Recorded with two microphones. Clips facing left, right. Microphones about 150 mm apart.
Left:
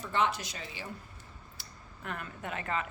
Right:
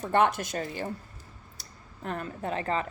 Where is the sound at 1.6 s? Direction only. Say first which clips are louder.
Right 6 dB; 35° right (ahead or behind).